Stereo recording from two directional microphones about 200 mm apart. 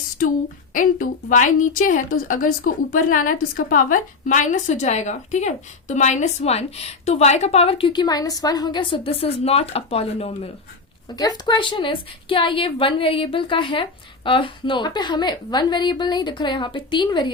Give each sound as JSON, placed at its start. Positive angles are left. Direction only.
{"t": 0.2, "sound": "a woman's voice", "side_deg": 40}